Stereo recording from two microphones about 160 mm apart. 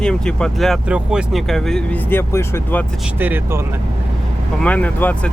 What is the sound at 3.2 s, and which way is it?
Speech, 10° right (ahead or behind).